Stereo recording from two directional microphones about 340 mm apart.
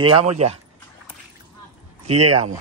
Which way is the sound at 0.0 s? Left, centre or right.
Centre.